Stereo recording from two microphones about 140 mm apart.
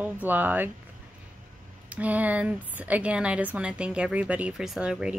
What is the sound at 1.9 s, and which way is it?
Speech, 10° right (ahead or behind).